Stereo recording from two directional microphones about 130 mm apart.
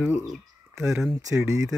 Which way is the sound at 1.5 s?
25° right (ahead or behind).